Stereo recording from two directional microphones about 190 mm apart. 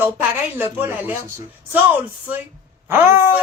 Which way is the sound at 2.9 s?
10° right (ahead or behind).